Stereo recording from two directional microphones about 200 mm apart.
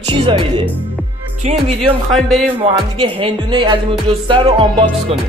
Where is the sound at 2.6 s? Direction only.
25° right (ahead or behind).